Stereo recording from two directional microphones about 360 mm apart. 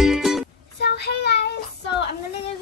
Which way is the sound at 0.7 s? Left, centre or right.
Left.